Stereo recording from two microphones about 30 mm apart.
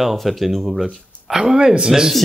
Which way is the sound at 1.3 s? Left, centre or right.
Right.